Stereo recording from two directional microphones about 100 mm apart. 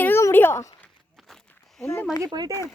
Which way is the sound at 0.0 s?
25° left (ahead or behind).